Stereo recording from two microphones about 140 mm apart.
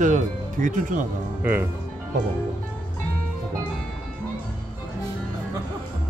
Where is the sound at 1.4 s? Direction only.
15° right (ahead or behind).